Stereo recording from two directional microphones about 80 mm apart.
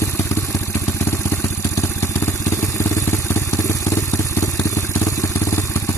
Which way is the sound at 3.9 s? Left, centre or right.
Left.